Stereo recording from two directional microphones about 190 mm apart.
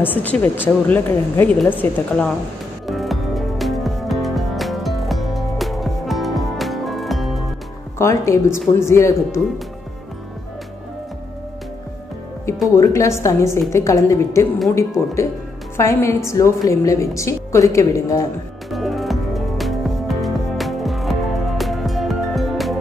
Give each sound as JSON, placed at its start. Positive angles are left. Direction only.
{"t": 0.0, "sound": "a woman's voice", "side_deg": 10}
{"t": 2.9, "sound": "music", "side_deg": 0}
{"t": 8.0, "sound": "a woman's voice", "side_deg": 15}
{"t": 12.7, "sound": "a woman's voice", "side_deg": 15}
{"t": 15.8, "sound": "a woman's voice", "side_deg": 15}
{"t": 18.7, "sound": "music", "side_deg": 0}